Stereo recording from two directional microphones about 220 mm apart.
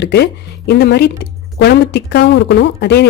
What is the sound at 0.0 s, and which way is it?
A woman's voice, 50° left (ahead or behind).